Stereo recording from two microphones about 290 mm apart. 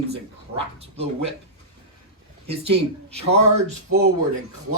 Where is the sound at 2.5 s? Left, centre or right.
Right.